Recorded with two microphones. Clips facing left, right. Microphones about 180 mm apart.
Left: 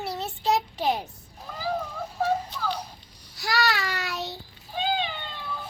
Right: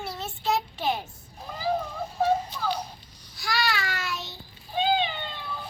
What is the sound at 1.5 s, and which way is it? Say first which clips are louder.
Cat: even; 10° right (ahead or behind).